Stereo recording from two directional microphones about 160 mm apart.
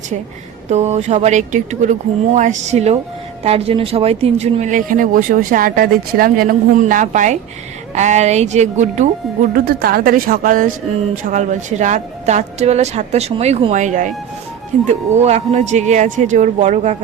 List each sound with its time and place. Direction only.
0.7 s speech: 45° right (ahead or behind)
9.6 s speech: 70° right (ahead or behind); by 17.0 s 45° right (ahead or behind)